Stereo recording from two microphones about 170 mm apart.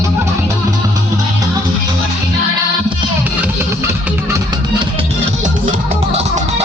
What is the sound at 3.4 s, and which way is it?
Music, 15° right (ahead or behind).